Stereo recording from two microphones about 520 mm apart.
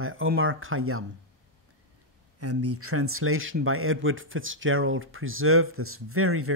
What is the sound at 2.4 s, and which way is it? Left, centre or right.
Speech, right.